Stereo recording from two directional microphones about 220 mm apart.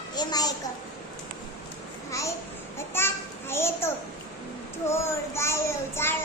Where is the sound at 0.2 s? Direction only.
20° left (ahead or behind).